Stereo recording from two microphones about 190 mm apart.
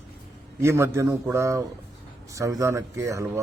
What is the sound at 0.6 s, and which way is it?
Speech, 15° right (ahead or behind).